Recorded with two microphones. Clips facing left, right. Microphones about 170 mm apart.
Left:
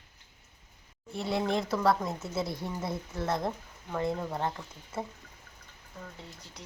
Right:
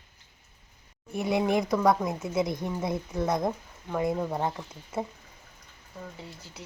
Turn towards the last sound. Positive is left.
turn(degrees=-20)  # may be behind; listen again after turning